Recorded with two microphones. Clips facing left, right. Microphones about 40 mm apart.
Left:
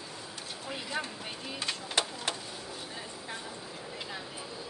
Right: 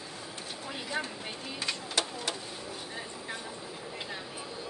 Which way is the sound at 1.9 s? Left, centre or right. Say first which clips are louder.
Left 2 dB; left.